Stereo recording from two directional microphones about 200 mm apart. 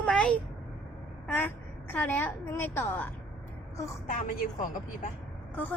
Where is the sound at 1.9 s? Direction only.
10° left (ahead or behind).